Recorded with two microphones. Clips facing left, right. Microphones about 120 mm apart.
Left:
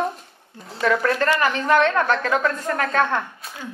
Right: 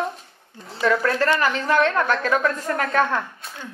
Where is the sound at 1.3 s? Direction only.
20° left (ahead or behind).